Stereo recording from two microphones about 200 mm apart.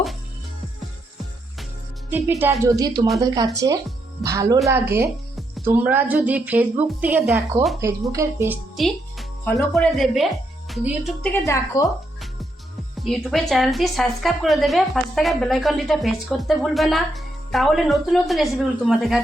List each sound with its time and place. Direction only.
2.0 s speech: 10° right (ahead or behind)
8.7 s music: centre (ahead or behind)
9.6 s speech: centre (ahead or behind)
11.4 s speech: 15° left (ahead or behind)
13.0 s a woman's voice: centre (ahead or behind)